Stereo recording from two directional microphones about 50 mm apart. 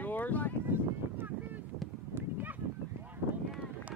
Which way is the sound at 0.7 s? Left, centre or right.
Right.